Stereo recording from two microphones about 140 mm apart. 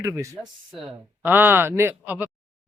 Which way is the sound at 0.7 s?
10° right (ahead or behind).